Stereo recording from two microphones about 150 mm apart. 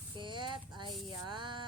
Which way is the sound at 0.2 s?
30° right (ahead or behind).